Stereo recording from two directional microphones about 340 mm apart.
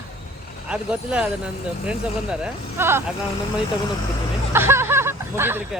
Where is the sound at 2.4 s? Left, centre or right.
Centre.